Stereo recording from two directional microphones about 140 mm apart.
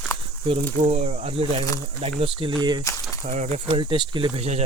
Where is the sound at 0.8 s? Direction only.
50° right (ahead or behind).